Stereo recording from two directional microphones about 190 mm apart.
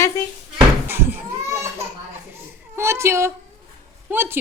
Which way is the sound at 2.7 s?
15° right (ahead or behind).